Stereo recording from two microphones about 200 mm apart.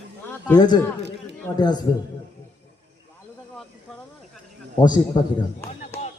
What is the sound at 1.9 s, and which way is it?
Speech, 20° left (ahead or behind).